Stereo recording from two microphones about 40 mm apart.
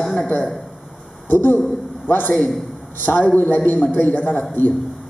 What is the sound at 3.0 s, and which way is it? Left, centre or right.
A man's voice, left.